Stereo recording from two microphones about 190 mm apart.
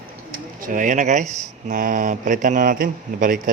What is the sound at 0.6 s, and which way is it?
Speech, 45° right (ahead or behind).